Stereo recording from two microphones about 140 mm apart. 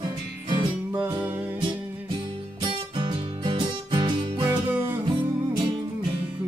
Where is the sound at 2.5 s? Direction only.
35° right (ahead or behind).